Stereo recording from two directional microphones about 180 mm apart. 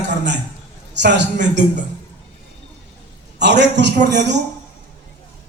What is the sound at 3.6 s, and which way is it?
Speech, 75° right (ahead or behind).